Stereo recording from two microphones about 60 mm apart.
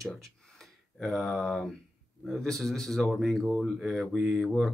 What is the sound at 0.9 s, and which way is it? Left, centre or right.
Speech, centre.